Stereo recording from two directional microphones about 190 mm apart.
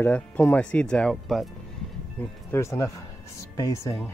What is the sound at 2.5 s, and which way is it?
Speech, 15° left (ahead or behind).